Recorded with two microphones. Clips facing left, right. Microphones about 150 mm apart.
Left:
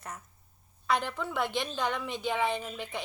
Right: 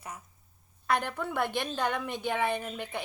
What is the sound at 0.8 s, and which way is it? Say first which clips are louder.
A woman's voice: even; 50° right (ahead or behind).